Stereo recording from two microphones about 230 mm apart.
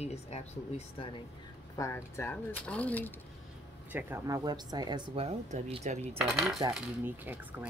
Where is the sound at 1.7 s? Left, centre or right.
Centre.